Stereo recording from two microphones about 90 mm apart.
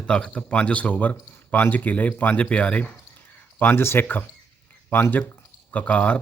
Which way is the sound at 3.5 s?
25° left (ahead or behind).